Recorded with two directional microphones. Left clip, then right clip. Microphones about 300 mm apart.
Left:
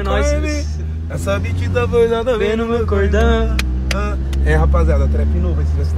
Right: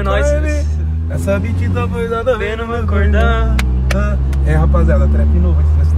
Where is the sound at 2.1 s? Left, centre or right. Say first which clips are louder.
Even; centre.